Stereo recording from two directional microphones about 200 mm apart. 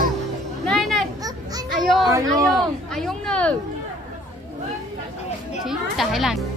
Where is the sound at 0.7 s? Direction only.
Centre (ahead or behind).